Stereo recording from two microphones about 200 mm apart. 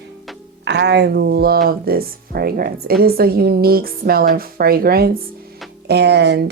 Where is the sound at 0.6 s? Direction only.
55° right (ahead or behind).